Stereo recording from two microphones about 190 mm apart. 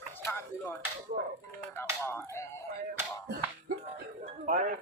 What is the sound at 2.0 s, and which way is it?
Speech, 15° left (ahead or behind).